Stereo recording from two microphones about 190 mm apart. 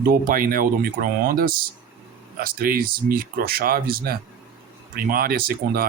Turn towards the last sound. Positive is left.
turn(degrees=-50)  # may be behind; listen again after turning